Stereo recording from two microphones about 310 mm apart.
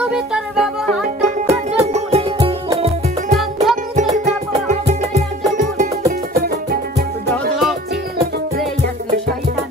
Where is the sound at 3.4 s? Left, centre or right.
Centre.